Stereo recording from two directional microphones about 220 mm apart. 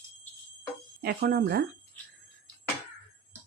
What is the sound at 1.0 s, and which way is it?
Speech, 45° right (ahead or behind).